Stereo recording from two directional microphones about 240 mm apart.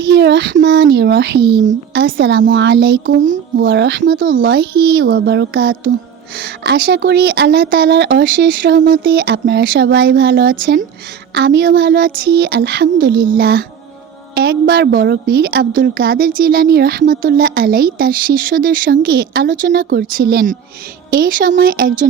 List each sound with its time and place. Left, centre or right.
0.0 s a woman's voice: right